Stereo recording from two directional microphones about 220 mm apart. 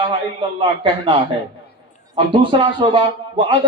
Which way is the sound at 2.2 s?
20° right (ahead or behind).